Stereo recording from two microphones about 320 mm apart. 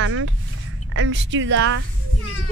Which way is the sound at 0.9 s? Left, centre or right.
Right.